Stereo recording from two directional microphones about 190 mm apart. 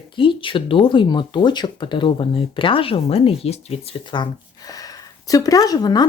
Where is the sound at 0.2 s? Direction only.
25° left (ahead or behind).